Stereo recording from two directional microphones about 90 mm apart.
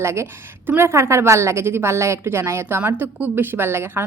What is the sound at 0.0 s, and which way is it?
A woman's voice, 30° right (ahead or behind).